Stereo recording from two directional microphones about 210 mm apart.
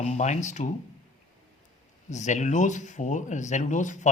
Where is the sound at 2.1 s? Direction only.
35° left (ahead or behind).